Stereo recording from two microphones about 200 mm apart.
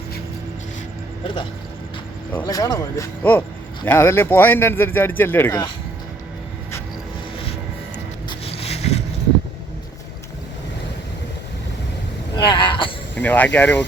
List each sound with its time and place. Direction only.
2.3 s speech: 15° left (ahead or behind)
8.3 s vehicle: 30° left (ahead or behind)
12.5 s a sound: 25° left (ahead or behind)
13.1 s speech: 10° left (ahead or behind)